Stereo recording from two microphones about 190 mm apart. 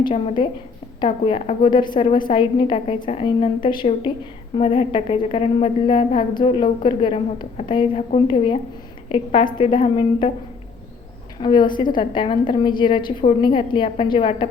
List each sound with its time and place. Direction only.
0.0 s a woman's voice: 30° left (ahead or behind)
11.3 s a woman's voice: 25° left (ahead or behind)